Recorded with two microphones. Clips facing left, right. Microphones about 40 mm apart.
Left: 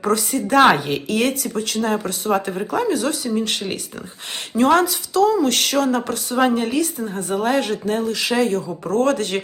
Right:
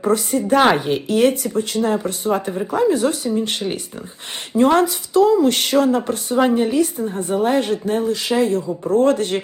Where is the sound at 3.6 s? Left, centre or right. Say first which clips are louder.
Right 3 dB; centre.